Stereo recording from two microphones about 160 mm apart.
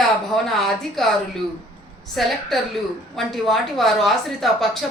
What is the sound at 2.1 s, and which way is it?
A woman's voice, centre (ahead or behind).